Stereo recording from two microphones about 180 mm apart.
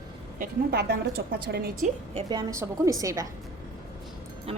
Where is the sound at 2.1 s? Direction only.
35° right (ahead or behind).